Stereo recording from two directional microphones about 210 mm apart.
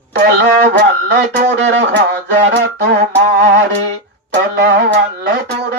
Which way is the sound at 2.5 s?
55° right (ahead or behind).